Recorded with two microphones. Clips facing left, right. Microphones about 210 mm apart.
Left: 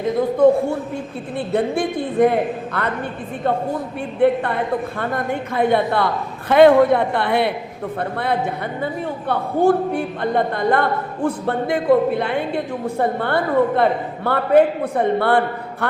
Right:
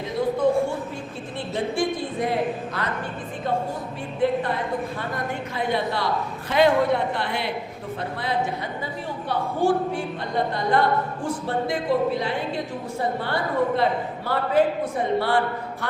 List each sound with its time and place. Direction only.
1.5 s a man's voice: 60° left (ahead or behind)
4.2 s a man's voice: 65° left (ahead or behind)